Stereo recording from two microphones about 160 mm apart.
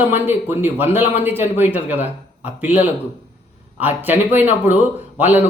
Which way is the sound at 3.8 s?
10° right (ahead or behind).